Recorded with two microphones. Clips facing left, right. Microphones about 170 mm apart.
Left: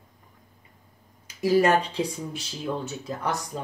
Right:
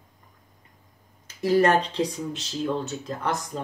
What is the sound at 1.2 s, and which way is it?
Speech, 10° left (ahead or behind).